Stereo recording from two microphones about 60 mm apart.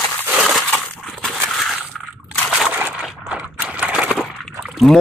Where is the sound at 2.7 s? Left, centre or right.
Right.